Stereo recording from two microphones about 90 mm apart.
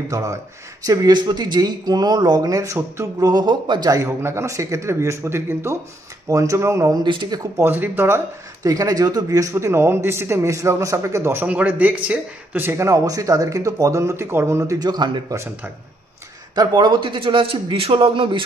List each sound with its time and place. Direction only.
0.1 s speech: 40° right (ahead or behind); by 3.9 s 55° right (ahead or behind)
3.9 s speech: 30° right (ahead or behind)
7.1 s speech: 55° right (ahead or behind)
7.5 s speech: 25° right (ahead or behind)
8.6 s speech: 45° right (ahead or behind)
11.4 s speech: 15° right (ahead or behind)
12.6 s speech: 35° right (ahead or behind)
14.8 s speech: 50° right (ahead or behind)
16.5 s a man's voice: 60° right (ahead or behind); by 18.4 s 85° right